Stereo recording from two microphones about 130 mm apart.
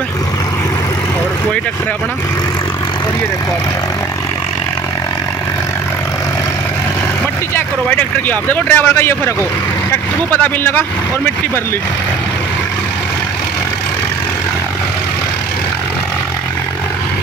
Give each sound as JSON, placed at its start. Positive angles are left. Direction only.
{"t": 7.5, "sound": "speech", "side_deg": 15}